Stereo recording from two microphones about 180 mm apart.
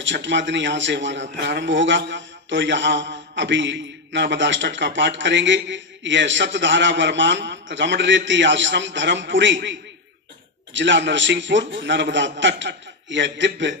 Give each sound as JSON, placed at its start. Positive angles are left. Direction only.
{"t": 0.0, "sound": "a man's voice", "side_deg": -90}